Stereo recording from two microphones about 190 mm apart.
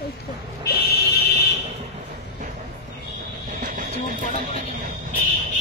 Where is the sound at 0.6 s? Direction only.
55° left (ahead or behind).